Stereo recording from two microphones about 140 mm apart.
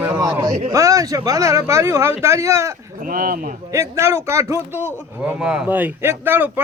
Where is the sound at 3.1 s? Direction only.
80° right.